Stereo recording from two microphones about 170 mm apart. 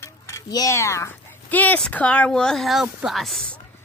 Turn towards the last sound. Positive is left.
turn(degrees=0)  # may be behind; listen again after turning